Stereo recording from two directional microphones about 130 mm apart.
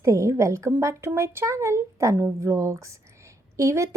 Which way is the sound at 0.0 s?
25° right (ahead or behind).